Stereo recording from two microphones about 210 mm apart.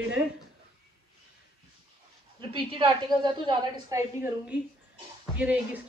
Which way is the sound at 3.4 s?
10° right (ahead or behind).